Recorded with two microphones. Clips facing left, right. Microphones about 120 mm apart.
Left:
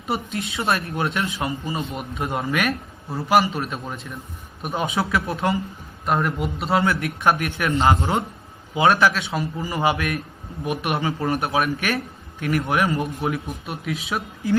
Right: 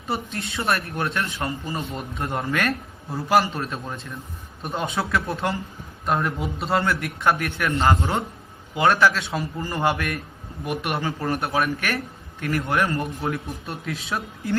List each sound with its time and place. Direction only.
0.6 s a man's voice: 25° left (ahead or behind); by 7.0 s centre (ahead or behind)
7.3 s a man's voice: 15° left (ahead or behind)
9.1 s speech: centre (ahead or behind)
10.7 s a man's voice: 20° left (ahead or behind)